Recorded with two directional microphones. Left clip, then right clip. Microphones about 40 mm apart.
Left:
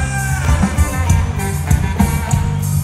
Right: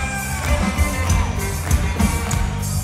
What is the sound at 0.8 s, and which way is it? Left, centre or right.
Music, left.